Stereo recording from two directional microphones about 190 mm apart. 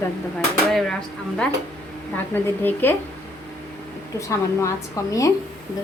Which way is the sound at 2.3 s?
10° left (ahead or behind).